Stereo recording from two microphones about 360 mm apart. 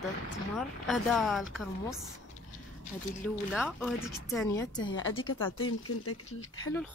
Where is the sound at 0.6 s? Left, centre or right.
Centre.